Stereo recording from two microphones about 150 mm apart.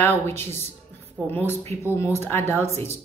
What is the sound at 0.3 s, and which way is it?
A woman's voice, 15° left (ahead or behind).